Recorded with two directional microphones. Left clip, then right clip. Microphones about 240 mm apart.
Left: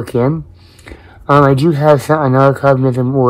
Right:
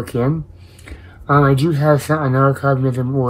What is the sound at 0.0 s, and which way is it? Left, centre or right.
Speech, left.